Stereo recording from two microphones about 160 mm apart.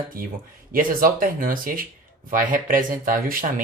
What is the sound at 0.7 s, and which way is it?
Speech, 60° right (ahead or behind).